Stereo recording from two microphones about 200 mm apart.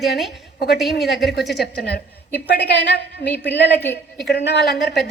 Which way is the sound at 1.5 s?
55° left (ahead or behind).